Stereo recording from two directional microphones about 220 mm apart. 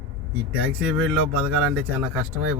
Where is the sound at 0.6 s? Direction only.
5° right (ahead or behind).